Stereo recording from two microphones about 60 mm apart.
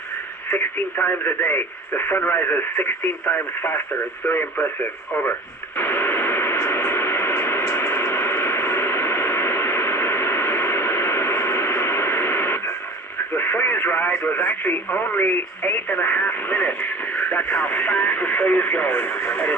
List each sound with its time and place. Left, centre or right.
0.5 s speech: left
5.7 s radio: left
13.3 s speech: left